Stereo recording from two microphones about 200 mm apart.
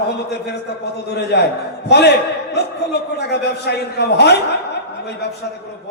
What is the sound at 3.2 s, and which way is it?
A man's voice, 55° left (ahead or behind).